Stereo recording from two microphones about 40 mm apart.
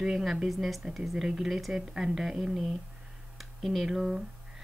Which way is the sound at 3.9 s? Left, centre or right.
Centre.